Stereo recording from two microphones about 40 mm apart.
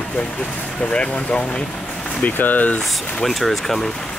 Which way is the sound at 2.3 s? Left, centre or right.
Left.